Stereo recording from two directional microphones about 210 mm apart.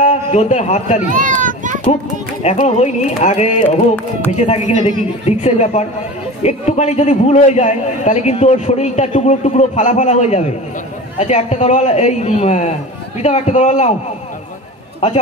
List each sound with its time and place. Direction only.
0.0 s a man's voice: 30° left (ahead or behind)
1.1 s a child's voice: 40° right (ahead or behind)
2.4 s a man's voice: 30° left (ahead or behind)
3.6 s speech: 10° left (ahead or behind)
4.4 s a man's voice: 35° left (ahead or behind)